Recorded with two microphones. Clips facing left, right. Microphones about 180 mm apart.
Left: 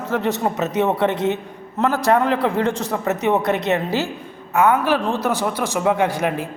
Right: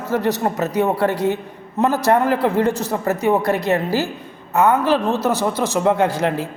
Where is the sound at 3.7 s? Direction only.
20° left (ahead or behind).